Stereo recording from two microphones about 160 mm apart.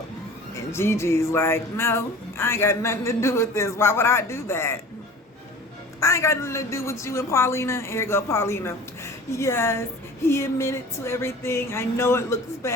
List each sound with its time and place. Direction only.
0.5 s speech: 15° left (ahead or behind)
6.0 s speech: 15° left (ahead or behind)